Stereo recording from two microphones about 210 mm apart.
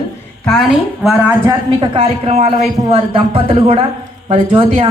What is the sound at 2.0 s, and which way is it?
Speech, 30° right (ahead or behind).